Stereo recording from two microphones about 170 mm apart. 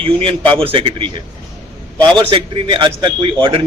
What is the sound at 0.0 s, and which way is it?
A man's voice, 30° right (ahead or behind).